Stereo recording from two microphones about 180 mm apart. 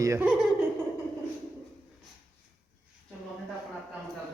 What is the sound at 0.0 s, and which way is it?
Speech, 15° right (ahead or behind).